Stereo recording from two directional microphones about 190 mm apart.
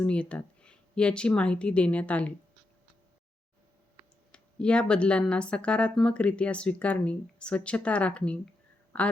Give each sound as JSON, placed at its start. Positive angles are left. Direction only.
{"t": 0.0, "sound": "speech", "side_deg": 5}
{"t": 4.3, "sound": "speech", "side_deg": 5}